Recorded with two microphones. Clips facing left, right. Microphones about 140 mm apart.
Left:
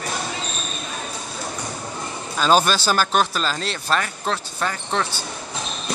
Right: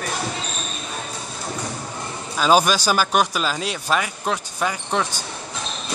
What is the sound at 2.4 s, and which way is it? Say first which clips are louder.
Speech: right 1 dB; 10° right (ahead or behind).